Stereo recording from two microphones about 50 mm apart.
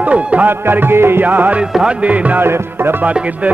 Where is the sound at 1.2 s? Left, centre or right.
Right.